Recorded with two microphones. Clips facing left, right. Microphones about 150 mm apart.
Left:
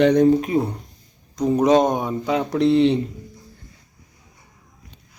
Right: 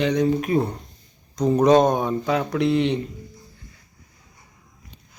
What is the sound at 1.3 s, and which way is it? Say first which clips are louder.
Speech: even; 10° left (ahead or behind).